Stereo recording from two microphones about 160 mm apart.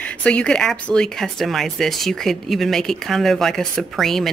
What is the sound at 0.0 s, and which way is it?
Speech, 5° left (ahead or behind).